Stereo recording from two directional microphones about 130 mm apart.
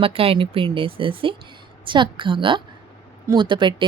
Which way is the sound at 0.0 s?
45° right (ahead or behind).